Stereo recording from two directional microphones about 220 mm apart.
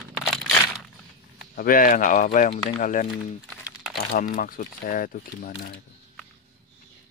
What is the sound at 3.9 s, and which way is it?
Speech, 40° left (ahead or behind).